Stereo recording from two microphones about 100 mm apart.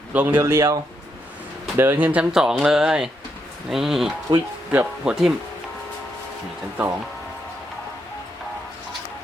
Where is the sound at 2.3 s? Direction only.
5° right (ahead or behind).